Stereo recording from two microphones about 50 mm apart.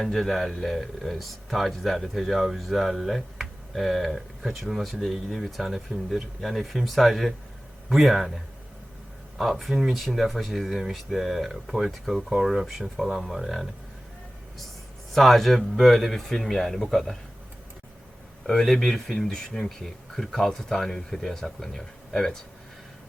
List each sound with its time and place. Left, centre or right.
0.0 s a man's voice: centre
9.4 s a man's voice: centre
15.1 s a man's voice: centre
18.4 s speech: centre
22.1 s speech: centre